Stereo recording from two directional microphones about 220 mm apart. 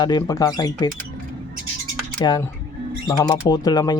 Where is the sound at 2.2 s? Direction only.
20° left (ahead or behind).